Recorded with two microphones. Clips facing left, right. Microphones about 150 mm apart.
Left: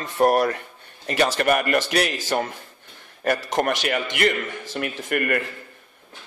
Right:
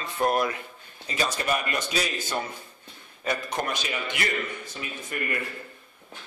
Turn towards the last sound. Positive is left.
turn(degrees=65)  # may be behind; listen again after turning